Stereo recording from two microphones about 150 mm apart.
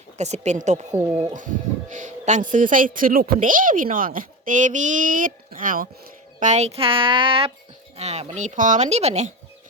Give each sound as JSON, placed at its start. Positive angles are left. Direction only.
{"t": 0.2, "sound": "speech", "side_deg": -50}
{"t": 0.9, "sound": "speech", "side_deg": -15}
{"t": 1.3, "sound": "a woman's voice", "side_deg": -60}
{"t": 6.4, "sound": "speech", "side_deg": -50}